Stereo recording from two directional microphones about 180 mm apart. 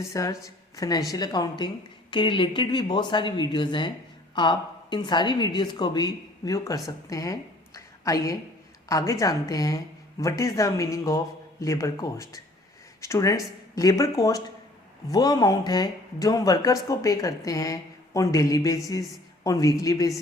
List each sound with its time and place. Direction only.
0.0 s speech: 15° left (ahead or behind)